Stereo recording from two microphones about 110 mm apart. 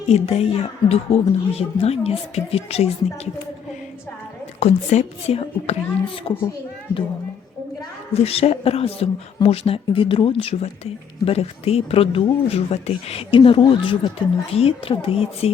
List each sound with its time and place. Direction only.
0.1 s a woman's voice: 65° left (ahead or behind)
4.6 s a woman's voice: 80° left; by 6.5 s 55° left (ahead or behind)
8.1 s speech: 65° left (ahead or behind); by 14.1 s 45° left (ahead or behind)
14.5 s speech: 60° left (ahead or behind)